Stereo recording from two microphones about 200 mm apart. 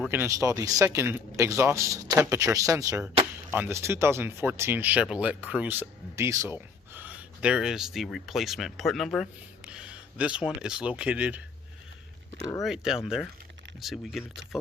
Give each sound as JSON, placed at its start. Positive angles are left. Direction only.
{"t": 0.0, "sound": "speech", "side_deg": -10}
{"t": 12.4, "sound": "speech", "side_deg": 15}
{"t": 12.6, "sound": "speech", "side_deg": 0}